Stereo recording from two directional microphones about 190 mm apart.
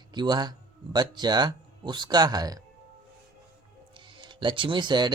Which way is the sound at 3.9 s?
25° right (ahead or behind).